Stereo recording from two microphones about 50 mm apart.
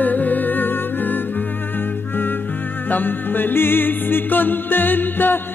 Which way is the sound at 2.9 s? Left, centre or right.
Left.